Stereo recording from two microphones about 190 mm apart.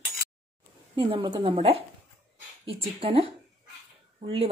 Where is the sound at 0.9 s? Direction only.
25° right (ahead or behind).